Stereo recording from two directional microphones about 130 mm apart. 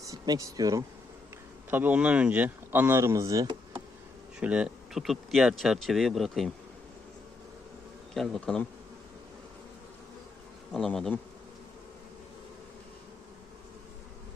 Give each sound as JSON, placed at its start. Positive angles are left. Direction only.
{"t": 0.0, "sound": "speech", "side_deg": -25}
{"t": 1.7, "sound": "speech", "side_deg": -10}
{"t": 4.4, "sound": "speech", "side_deg": -10}
{"t": 8.1, "sound": "speech", "side_deg": 0}
{"t": 10.7, "sound": "speech", "side_deg": 0}